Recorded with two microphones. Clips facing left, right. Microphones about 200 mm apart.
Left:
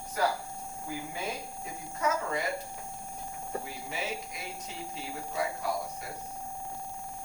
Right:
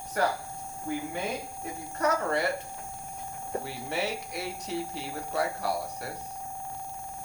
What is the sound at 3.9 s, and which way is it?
Speech, 70° right (ahead or behind).